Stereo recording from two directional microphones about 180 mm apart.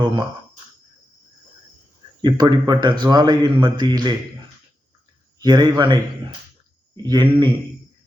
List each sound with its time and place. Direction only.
2.2 s speech: 25° right (ahead or behind)
5.4 s speech: 20° right (ahead or behind)